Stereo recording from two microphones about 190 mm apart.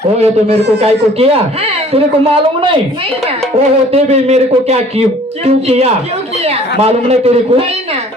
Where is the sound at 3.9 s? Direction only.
35° right (ahead or behind).